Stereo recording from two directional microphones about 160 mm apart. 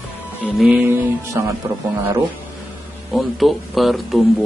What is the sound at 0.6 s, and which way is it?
A man's voice, 10° right (ahead or behind).